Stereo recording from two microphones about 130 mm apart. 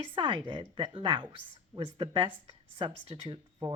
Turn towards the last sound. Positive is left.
turn(degrees=-40)  # may be behind; listen again after turning